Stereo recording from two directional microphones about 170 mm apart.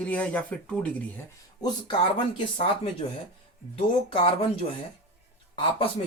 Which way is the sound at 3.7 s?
35° left (ahead or behind).